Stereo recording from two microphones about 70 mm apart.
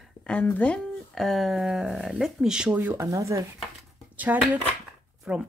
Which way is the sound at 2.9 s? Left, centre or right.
Right.